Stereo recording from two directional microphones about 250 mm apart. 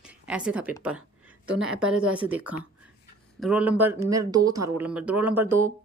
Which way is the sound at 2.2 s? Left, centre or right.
Centre.